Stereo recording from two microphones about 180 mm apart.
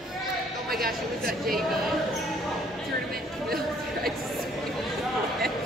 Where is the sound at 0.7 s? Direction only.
55° right (ahead or behind).